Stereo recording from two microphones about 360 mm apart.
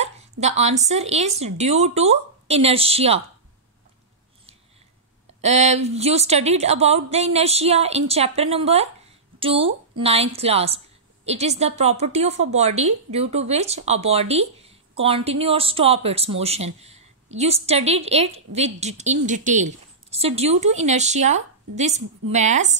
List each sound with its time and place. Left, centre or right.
0.0 s speech: centre
5.4 s a woman's voice: centre